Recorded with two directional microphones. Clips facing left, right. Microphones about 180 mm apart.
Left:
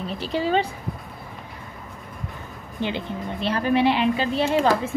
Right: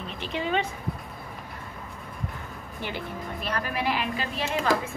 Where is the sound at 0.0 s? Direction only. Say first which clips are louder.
Left 6 dB; 35° left (ahead or behind).